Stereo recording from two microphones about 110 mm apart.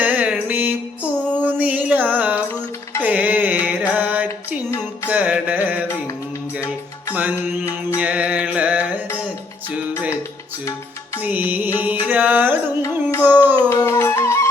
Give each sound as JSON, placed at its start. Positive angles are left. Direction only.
{"t": 0.0, "sound": "mantra", "side_deg": -15}
{"t": 1.4, "sound": "a sound", "side_deg": -15}
{"t": 3.0, "sound": "music", "side_deg": -15}
{"t": 7.1, "sound": "music", "side_deg": -15}
{"t": 7.9, "sound": "mantra", "side_deg": -10}
{"t": 11.2, "sound": "music", "side_deg": -15}
{"t": 12.8, "sound": "music", "side_deg": 25}
{"t": 13.2, "sound": "a sound", "side_deg": -15}
{"t": 13.7, "sound": "music", "side_deg": 30}